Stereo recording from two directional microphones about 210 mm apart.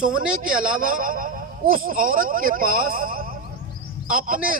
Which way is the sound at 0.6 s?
40° right (ahead or behind).